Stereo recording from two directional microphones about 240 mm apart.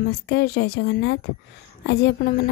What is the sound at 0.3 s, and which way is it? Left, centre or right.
A woman's voice, left.